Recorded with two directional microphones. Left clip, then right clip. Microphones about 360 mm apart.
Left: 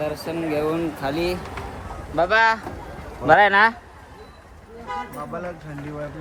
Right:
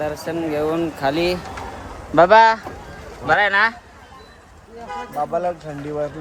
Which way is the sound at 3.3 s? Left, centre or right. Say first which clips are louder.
Left 2 dB; centre.